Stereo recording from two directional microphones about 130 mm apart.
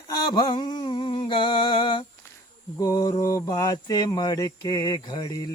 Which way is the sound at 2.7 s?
30° left (ahead or behind).